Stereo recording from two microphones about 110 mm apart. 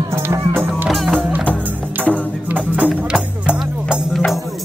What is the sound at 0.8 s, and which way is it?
Music, centre (ahead or behind).